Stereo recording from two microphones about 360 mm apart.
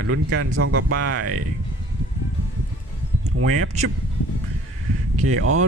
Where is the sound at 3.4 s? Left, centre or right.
Right.